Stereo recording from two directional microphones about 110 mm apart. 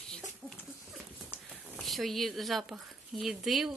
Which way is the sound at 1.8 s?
Centre (ahead or behind).